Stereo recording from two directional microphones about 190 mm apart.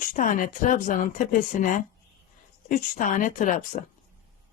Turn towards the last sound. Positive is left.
turn(degrees=40)  # may be behind; listen again after turning